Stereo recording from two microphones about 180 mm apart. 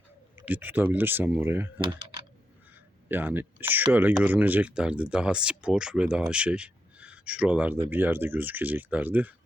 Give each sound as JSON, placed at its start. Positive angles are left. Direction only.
{"t": 0.3, "sound": "speech", "side_deg": -10}
{"t": 1.8, "sound": "typing", "side_deg": -25}
{"t": 3.1, "sound": "speech", "side_deg": -10}